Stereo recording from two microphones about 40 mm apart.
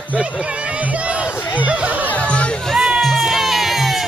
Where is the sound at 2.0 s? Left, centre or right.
Left.